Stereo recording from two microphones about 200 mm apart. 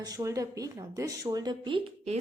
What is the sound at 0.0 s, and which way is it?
A woman's voice, 15° right (ahead or behind).